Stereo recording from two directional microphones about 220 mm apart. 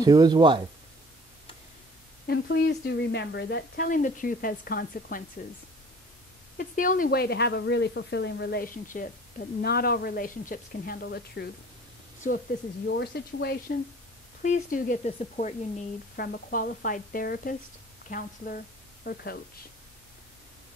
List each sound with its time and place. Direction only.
0.0 s speech: 15° right (ahead or behind)
2.2 s speech: 50° left (ahead or behind)
6.7 s speech: 35° left (ahead or behind)
12.8 s speech: 50° left (ahead or behind)
14.4 s a woman's voice: 35° left (ahead or behind)
16.2 s a woman's voice: 45° left (ahead or behind)